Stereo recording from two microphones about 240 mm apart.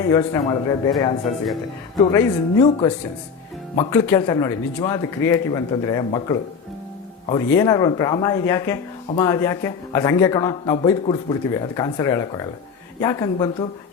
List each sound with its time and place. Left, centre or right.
0.1 s a man's voice: centre
3.8 s a man's voice: centre